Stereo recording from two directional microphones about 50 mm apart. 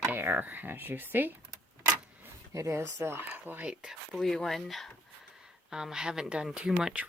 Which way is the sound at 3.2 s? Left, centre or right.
Right.